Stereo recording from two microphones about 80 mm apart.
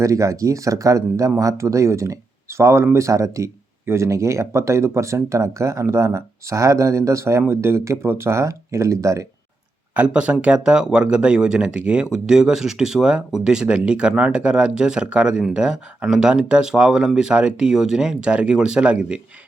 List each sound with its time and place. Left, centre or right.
0.0 s speech: right
9.9 s speech: centre